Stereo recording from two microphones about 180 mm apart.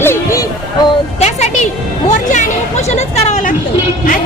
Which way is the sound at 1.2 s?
40° left (ahead or behind).